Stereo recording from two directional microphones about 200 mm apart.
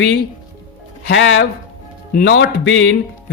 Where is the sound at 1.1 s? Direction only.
70° left (ahead or behind).